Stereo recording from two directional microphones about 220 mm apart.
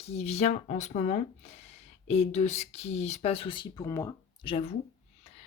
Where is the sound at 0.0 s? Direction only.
30° left (ahead or behind); by 4.5 s 15° left (ahead or behind).